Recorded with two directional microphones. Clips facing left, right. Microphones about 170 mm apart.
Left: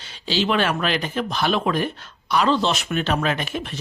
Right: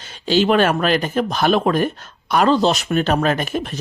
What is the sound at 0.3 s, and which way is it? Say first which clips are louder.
Speech: right 6 dB; 50° right (ahead or behind).